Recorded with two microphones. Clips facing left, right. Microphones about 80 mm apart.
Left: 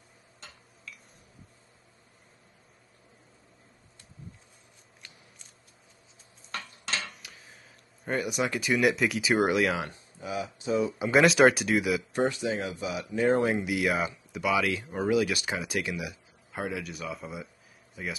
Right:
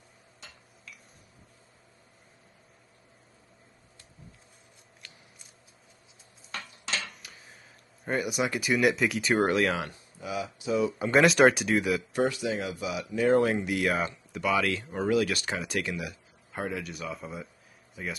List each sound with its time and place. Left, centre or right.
7.0 s a sound: centre
9.8 s speech: left
11.0 s speech: centre
12.1 s speech: left
13.6 s speech: centre
16.5 s a man's voice: centre